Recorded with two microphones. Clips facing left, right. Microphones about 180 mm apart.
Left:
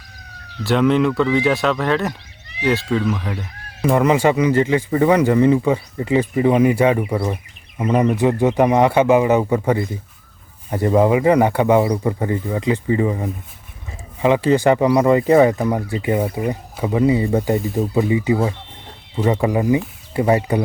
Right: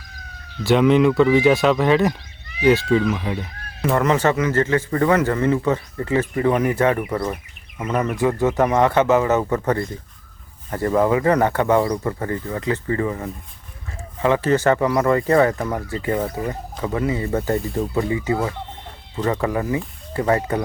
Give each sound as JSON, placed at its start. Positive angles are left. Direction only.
{"t": 0.6, "sound": "speech", "side_deg": 0}
{"t": 3.9, "sound": "speech", "side_deg": 10}
{"t": 10.7, "sound": "speech", "side_deg": 15}